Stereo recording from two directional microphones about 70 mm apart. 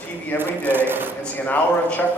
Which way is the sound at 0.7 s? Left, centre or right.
Right.